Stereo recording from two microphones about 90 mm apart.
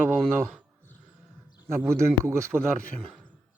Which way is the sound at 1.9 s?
30° right (ahead or behind).